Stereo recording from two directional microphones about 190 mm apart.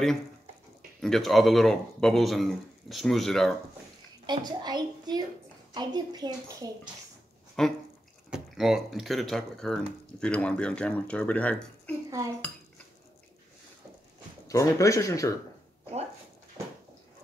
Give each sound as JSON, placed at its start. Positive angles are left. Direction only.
{"t": 1.0, "sound": "speech", "side_deg": 0}
{"t": 4.3, "sound": "a woman's voice", "side_deg": -20}
{"t": 7.6, "sound": "speech", "side_deg": 5}
{"t": 12.1, "sound": "cutlery", "side_deg": -15}
{"t": 14.5, "sound": "speech", "side_deg": 15}